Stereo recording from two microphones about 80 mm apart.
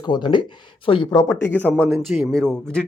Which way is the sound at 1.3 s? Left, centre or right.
Left.